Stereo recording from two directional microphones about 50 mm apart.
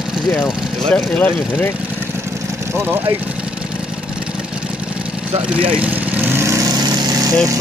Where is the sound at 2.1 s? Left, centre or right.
Right.